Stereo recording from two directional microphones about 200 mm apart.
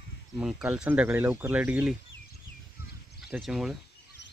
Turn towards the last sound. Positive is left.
turn(degrees=0)  # may be behind; listen again after turning